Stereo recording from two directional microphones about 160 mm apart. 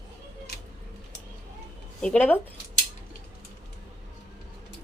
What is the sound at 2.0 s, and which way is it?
Speech, 5° left (ahead or behind).